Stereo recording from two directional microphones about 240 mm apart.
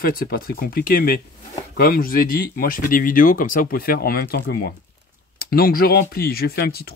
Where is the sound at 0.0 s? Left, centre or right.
Left.